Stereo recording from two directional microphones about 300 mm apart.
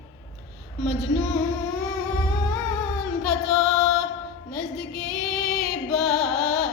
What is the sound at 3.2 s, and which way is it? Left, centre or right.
Female singing, centre.